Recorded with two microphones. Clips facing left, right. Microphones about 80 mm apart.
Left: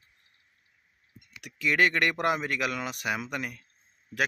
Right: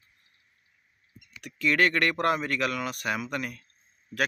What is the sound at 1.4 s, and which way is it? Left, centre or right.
Speech, centre.